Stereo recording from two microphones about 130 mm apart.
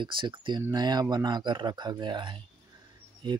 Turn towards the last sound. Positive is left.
turn(degrees=-40)  # may be behind; listen again after turning